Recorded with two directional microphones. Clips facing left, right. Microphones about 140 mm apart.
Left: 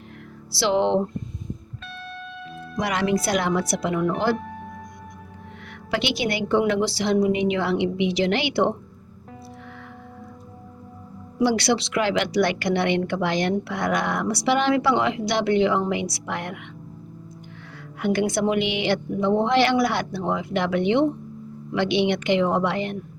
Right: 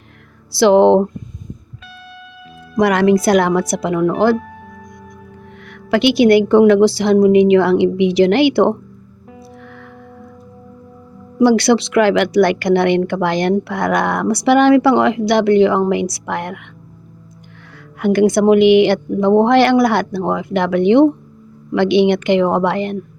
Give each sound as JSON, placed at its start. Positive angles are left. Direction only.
{"t": 0.5, "sound": "speech", "side_deg": -55}
{"t": 2.7, "sound": "speech", "side_deg": -55}
{"t": 5.7, "sound": "speech", "side_deg": -60}
{"t": 11.3, "sound": "speech", "side_deg": -55}
{"t": 18.0, "sound": "speech", "side_deg": -55}